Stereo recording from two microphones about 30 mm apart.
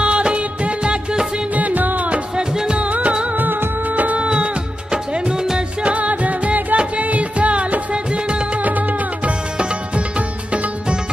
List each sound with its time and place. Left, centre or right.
0.0 s music of bollywood: right
1.5 s music: right
2.3 s music: right
2.8 s music: right
3.3 s music of bollywood: right
4.2 s music: right
5.9 s music: right
7.9 s music: right
8.6 s music: right
9.6 s music: right